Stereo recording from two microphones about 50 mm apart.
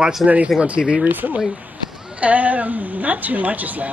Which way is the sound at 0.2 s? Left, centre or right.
Centre.